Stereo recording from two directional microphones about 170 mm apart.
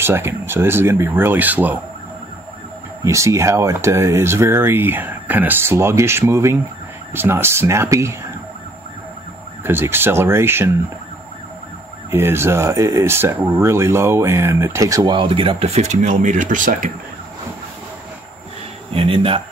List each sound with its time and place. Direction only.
0.0 s speech: 15° right (ahead or behind)
3.0 s speech: 15° right (ahead or behind)
9.6 s speech: 15° right (ahead or behind)
12.1 s speech: 15° right (ahead or behind); by 16.9 s 50° right (ahead or behind)
18.9 s speech: 35° right (ahead or behind)